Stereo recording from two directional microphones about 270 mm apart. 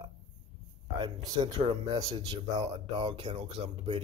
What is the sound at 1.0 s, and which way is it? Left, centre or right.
Speech, centre.